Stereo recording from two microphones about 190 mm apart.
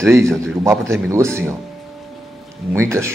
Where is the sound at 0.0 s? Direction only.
15° right (ahead or behind).